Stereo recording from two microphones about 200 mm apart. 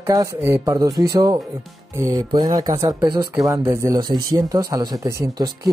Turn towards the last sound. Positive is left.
turn(degrees=-20)  # may be behind; listen again after turning